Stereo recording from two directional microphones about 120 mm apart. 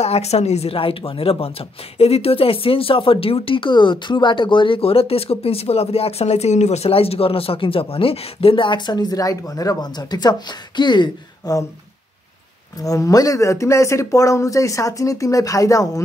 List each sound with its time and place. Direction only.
0.0 s speech: 60° left (ahead or behind); by 11.6 s 35° left (ahead or behind)
12.8 s speech: 30° left (ahead or behind)